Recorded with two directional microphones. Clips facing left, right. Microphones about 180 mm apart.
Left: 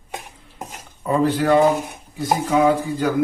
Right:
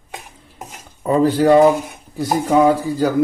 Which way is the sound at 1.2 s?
35° right (ahead or behind).